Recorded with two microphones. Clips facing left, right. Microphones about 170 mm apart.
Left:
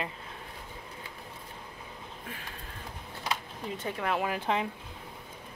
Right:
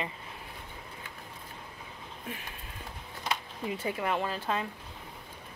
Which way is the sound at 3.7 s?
5° right (ahead or behind).